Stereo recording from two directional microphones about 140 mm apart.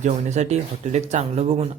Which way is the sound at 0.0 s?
55° right (ahead or behind).